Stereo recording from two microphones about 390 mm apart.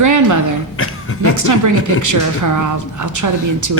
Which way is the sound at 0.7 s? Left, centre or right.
Left.